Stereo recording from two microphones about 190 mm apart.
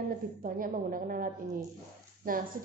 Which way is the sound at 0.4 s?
45° right (ahead or behind).